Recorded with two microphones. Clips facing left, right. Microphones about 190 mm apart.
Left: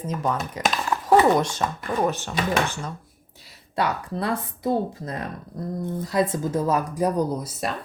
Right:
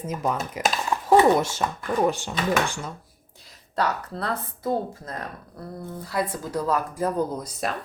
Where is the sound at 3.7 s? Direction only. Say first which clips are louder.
Left 1 dB; 15° left (ahead or behind).